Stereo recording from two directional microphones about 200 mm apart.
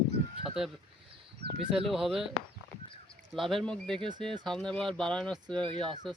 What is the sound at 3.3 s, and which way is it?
Speech, centre (ahead or behind).